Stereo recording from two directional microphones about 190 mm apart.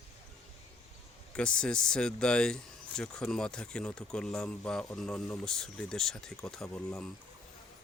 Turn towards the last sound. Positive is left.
turn(degrees=5)  # may be behind; listen again after turning